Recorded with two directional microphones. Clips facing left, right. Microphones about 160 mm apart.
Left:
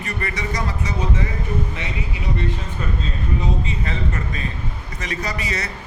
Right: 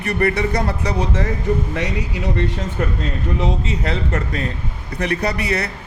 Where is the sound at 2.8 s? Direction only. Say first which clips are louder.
Right 7 dB; 65° right (ahead or behind).